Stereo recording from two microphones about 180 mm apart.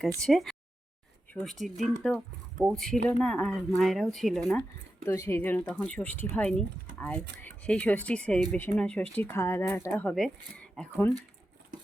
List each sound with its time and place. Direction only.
0.2 s speech: centre (ahead or behind)
5.0 s speech: 15° left (ahead or behind)
11.7 s a sound: 45° right (ahead or behind)